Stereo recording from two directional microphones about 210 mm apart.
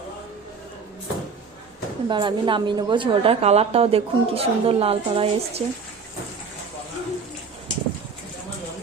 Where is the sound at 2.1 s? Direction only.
20° right (ahead or behind).